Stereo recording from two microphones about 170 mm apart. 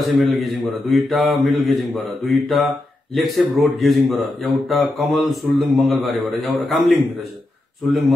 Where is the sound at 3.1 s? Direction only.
Centre (ahead or behind).